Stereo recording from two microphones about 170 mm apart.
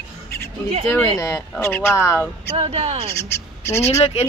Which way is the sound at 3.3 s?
15° left (ahead or behind).